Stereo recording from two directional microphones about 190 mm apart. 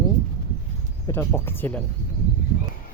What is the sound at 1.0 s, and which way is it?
Speech, 15° left (ahead or behind).